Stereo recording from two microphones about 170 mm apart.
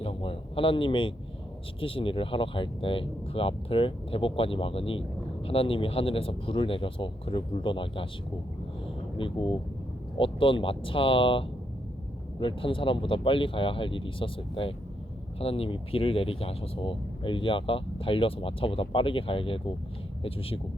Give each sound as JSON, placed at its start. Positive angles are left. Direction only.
{"t": 0.0, "sound": "a sound", "side_deg": 35}
{"t": 1.8, "sound": "speech", "side_deg": 30}
{"t": 9.1, "sound": "speech", "side_deg": 30}